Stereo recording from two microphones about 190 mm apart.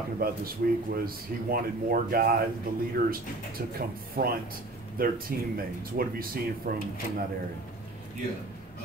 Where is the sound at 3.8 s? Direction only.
50° right (ahead or behind).